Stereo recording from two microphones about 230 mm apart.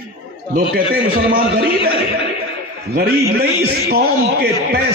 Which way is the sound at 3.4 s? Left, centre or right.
Right.